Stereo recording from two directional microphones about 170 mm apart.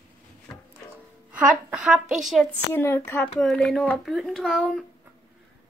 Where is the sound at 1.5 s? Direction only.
5° right (ahead or behind).